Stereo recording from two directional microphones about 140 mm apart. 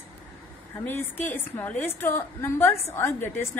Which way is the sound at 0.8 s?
15° left (ahead or behind).